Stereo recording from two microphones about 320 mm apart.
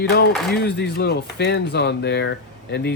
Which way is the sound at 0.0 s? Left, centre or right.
Left.